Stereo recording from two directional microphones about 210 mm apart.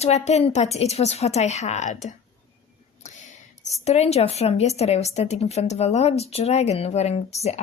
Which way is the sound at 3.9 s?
30° left (ahead or behind).